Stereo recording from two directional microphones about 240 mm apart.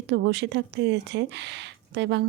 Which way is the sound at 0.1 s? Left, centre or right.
Right.